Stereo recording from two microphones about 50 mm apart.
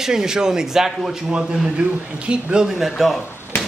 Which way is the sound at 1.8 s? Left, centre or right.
Right.